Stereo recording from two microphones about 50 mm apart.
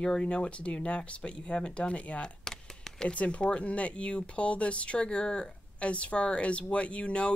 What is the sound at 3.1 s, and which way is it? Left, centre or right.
Speech, left.